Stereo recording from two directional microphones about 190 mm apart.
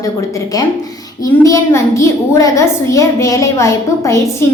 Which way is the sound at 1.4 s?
15° left (ahead or behind).